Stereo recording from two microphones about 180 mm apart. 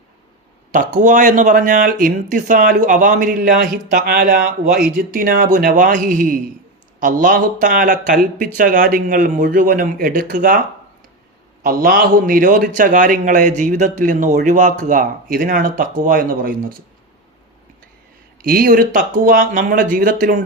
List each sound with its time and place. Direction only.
0.7 s a man's voice: 50° right (ahead or behind)
11.6 s a man's voice: 55° right (ahead or behind)
18.4 s a man's voice: 50° right (ahead or behind)